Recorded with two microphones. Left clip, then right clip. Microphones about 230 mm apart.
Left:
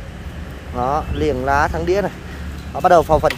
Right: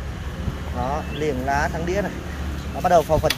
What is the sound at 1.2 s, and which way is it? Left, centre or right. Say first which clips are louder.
Speech: left 5 dB; centre.